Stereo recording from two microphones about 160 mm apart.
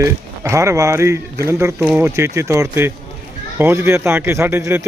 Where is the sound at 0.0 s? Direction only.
20° right (ahead or behind).